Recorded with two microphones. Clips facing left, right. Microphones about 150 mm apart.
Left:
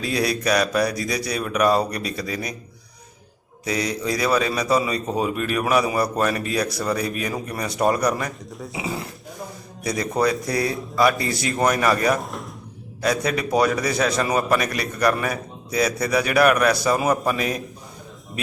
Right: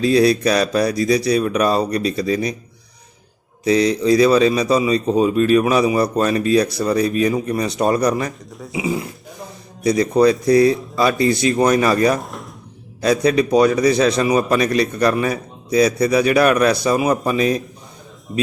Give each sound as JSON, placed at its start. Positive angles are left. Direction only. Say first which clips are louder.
{"t": 0.0, "sound": "a man's voice", "louder": "right 9 dB", "side_deg": -25}
{"t": 3.7, "sound": "a man's voice", "louder": "right 10 dB", "side_deg": -25}
{"t": 8.5, "sound": "speech", "louder": "right 5 dB", "side_deg": 0}
{"t": 8.8, "sound": "a man's voice", "louder": "right 8 dB", "side_deg": -15}
{"t": 12.2, "sound": "speech", "louder": "even", "side_deg": 0}
{"t": 13.0, "sound": "a man's voice", "louder": "right 7 dB", "side_deg": -25}